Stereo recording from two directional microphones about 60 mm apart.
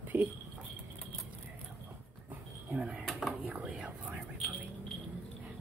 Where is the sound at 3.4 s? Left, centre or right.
Right.